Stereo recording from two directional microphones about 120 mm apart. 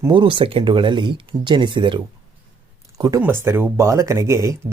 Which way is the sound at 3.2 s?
20° right (ahead or behind).